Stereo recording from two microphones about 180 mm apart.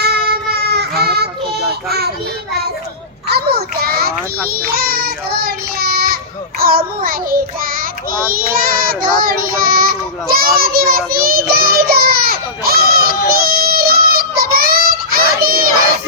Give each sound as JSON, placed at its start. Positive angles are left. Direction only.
{"t": 0.0, "sound": "child singing", "side_deg": -60}
{"t": 3.2, "sound": "child singing", "side_deg": -60}